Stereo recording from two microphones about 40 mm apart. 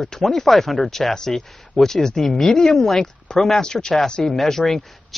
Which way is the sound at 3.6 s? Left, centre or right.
Centre.